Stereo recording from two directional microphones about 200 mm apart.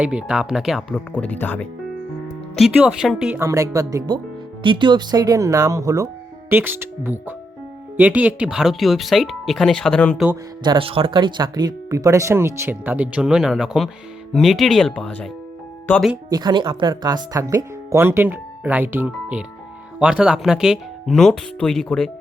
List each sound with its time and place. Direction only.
0.0 s speech: 5° right (ahead or behind)
2.6 s speech: 5° right (ahead or behind)
10.6 s speech: 25° right (ahead or behind); by 16.1 s 5° left (ahead or behind)
16.3 s speech: 20° right (ahead or behind); by 22.1 s 5° left (ahead or behind)